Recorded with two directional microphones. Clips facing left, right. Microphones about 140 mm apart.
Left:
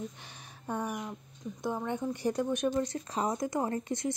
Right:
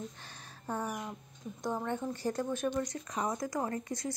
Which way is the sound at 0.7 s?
15° left (ahead or behind).